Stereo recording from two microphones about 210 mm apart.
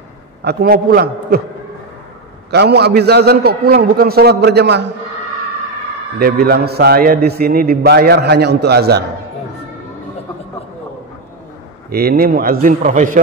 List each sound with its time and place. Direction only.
0.4 s a man's voice: 50° right (ahead or behind)
2.5 s a man's voice: 50° right (ahead or behind)
6.1 s a man's voice: 45° right (ahead or behind)
11.9 s a man's voice: 45° right (ahead or behind)